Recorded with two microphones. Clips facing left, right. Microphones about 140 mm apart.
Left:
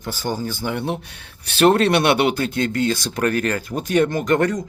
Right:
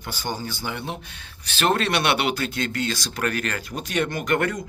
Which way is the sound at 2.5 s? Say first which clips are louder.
Left 6 dB; 45° left (ahead or behind).